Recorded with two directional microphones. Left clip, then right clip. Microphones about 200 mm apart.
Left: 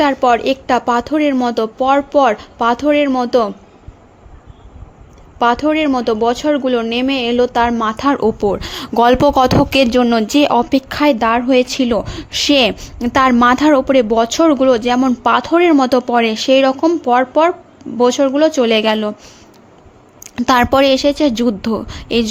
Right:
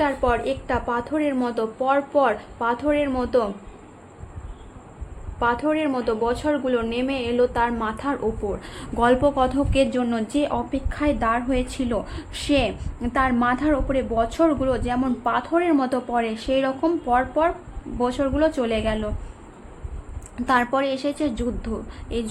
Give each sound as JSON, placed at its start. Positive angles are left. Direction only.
{"t": 0.0, "sound": "speech", "side_deg": 45}
{"t": 5.4, "sound": "speech", "side_deg": 45}
{"t": 20.4, "sound": "speech", "side_deg": 45}